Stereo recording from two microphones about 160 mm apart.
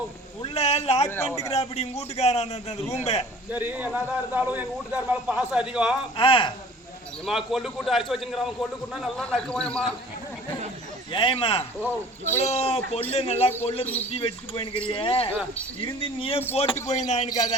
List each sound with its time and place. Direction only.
0.4 s a man's voice: 40° left (ahead or behind)
1.1 s a man's voice: 15° left (ahead or behind)
1.5 s a man's voice: 40° left (ahead or behind)
3.5 s a man's voice: 10° right (ahead or behind)
6.1 s a man's voice: 35° left (ahead or behind)
7.3 s a man's voice: centre (ahead or behind)
11.1 s a man's voice: 30° left (ahead or behind)
11.8 s a man's voice: 15° left (ahead or behind)
12.4 s a man's voice: 40° left (ahead or behind)
17.2 s a man's voice: 25° left (ahead or behind)